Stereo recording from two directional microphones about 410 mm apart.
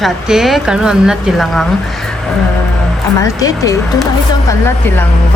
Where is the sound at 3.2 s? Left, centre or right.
Centre.